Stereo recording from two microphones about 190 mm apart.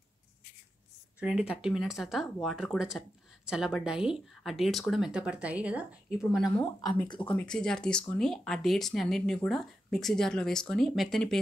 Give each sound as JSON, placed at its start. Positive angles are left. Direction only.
{"t": 1.2, "sound": "speech", "side_deg": -5}
{"t": 6.6, "sound": "speech", "side_deg": 20}
{"t": 7.2, "sound": "speech", "side_deg": 5}